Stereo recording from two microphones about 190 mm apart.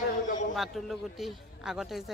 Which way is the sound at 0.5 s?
Centre (ahead or behind).